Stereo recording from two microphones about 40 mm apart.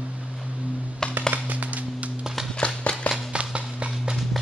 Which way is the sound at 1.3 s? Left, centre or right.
Right.